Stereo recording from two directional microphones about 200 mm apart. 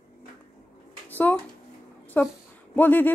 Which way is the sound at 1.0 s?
10° left (ahead or behind).